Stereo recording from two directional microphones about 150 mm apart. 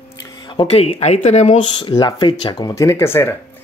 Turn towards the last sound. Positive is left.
turn(degrees=15)  # may be behind; listen again after turning